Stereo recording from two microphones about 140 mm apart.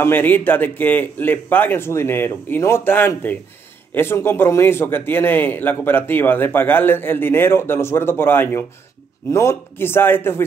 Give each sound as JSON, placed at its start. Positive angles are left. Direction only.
{"t": 0.0, "sound": "a man's voice", "side_deg": 15}